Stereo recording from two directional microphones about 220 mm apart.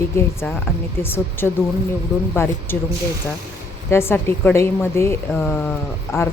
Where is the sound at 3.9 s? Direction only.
10° left (ahead or behind).